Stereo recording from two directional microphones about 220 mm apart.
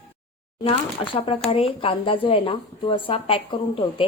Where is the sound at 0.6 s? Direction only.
25° left (ahead or behind).